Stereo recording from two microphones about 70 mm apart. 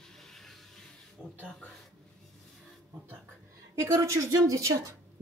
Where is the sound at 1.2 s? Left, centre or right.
Centre.